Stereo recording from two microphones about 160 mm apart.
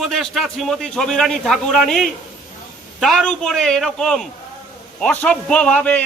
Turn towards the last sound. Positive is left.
turn(degrees=10)  # may be behind; listen again after turning